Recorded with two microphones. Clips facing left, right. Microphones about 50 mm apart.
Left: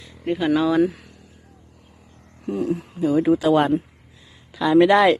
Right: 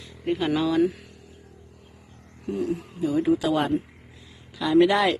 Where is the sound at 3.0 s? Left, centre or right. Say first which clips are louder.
Left 4 dB; left.